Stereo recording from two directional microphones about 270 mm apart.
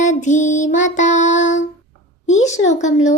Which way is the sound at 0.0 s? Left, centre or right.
Left.